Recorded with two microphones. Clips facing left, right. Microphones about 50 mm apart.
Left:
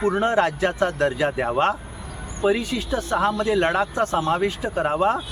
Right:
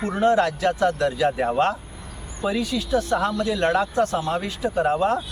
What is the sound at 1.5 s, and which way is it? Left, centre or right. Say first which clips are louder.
Speech: even; centre.